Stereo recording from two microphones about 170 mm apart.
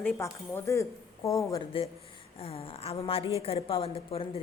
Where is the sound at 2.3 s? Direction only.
35° left (ahead or behind).